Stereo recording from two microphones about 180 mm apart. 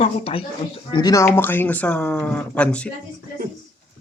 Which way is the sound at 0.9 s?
20° left (ahead or behind).